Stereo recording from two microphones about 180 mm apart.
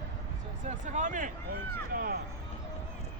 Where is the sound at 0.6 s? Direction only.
40° right (ahead or behind).